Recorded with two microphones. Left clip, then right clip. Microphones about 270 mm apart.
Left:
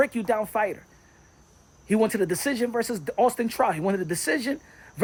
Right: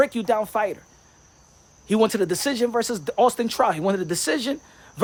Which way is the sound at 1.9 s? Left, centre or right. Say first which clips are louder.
Right 3 dB; centre.